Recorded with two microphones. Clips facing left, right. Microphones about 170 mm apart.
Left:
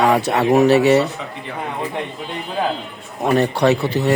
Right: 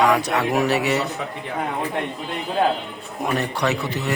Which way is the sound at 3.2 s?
35° left (ahead or behind).